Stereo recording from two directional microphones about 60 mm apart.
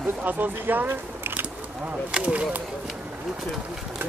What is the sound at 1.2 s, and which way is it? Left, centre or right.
Duck, right.